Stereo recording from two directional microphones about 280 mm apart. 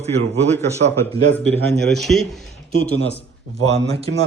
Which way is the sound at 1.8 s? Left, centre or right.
Centre.